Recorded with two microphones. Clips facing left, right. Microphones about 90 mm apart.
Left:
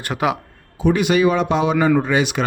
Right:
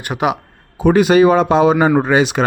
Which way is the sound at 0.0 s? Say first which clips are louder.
Right 2 dB; 15° right (ahead or behind).